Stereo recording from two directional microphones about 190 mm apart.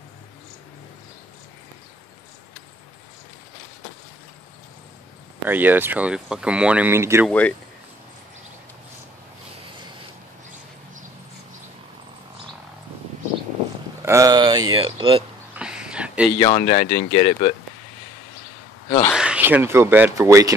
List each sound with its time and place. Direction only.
5.4 s speech: 10° right (ahead or behind)
7.2 s speech: 5° left (ahead or behind)
14.0 s speech: 15° right (ahead or behind)
15.5 s a sound: 5° right (ahead or behind)
16.3 s speech: 30° left (ahead or behind)
19.1 s speech: 5° right (ahead or behind)